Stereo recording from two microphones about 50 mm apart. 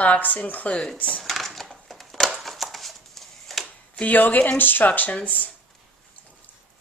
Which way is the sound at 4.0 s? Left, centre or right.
Left.